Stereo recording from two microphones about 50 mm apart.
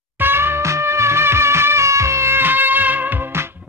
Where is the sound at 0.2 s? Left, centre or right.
Right.